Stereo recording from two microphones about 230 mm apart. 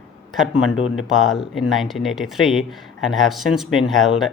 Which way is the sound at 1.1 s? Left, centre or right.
Centre.